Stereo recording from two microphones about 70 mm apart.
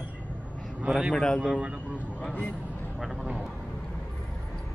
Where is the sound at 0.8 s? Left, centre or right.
Centre.